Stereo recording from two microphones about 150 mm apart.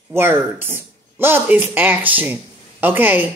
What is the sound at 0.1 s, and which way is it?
A woman's voice, 15° right (ahead or behind).